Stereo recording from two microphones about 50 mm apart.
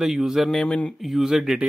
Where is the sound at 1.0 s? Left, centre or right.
Centre.